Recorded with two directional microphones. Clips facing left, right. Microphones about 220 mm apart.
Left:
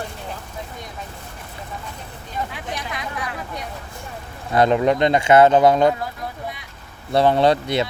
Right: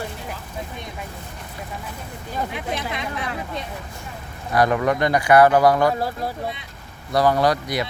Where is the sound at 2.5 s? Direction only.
25° right (ahead or behind).